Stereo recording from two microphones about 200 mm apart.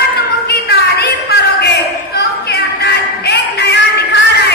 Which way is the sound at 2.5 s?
55° left (ahead or behind).